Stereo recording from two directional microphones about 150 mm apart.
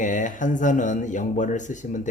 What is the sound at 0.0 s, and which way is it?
Speech, 60° left (ahead or behind).